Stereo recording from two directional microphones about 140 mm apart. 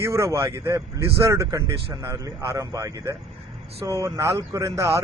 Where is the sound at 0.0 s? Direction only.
20° right (ahead or behind).